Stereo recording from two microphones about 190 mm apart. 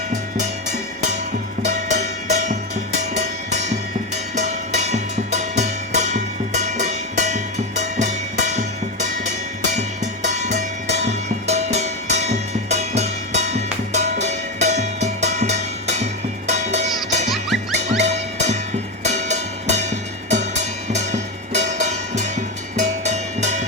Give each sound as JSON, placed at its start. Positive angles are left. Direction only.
{"t": 0.1, "sound": "music", "side_deg": -40}